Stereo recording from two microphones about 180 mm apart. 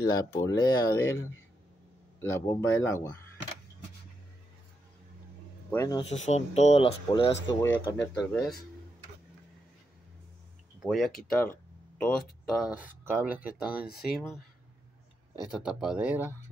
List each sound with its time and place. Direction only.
0.0 s speech: 20° left (ahead or behind)
5.7 s speech: 20° left (ahead or behind)
6.0 s speech: 40° left (ahead or behind)
7.6 s speech: 10° left (ahead or behind)
10.8 s speech: centre (ahead or behind)
12.7 s speech: 10° right (ahead or behind)
15.5 s speech: 5° right (ahead or behind)